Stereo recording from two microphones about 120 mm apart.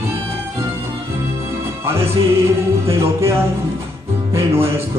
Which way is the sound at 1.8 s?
20° right (ahead or behind).